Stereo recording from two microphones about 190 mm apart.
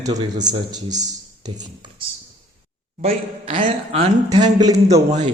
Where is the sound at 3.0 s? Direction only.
40° right (ahead or behind); by 5.0 s 20° right (ahead or behind).